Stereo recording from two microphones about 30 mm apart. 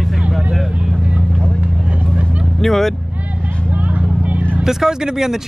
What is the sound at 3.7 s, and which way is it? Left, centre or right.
Vehicle, right.